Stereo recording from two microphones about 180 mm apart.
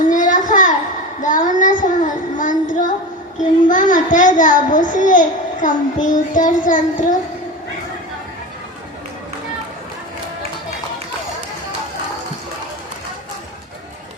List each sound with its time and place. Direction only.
0.0 s a sound: 45° left (ahead or behind)
1.2 s child singing: 45° left (ahead or behind)
3.7 s a child's voice: 45° left (ahead or behind)